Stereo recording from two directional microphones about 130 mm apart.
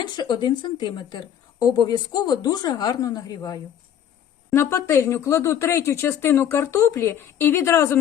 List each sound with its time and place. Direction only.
0.0 s a woman's voice: 35° left (ahead or behind)